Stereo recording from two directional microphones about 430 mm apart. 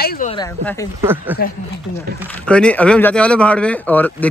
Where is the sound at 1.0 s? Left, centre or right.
Centre.